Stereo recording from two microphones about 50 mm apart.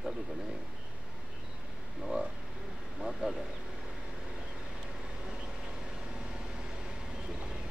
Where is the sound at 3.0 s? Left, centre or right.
Centre.